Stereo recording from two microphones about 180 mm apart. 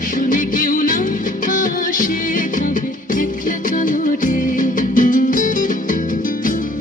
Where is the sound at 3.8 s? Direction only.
45° left (ahead or behind).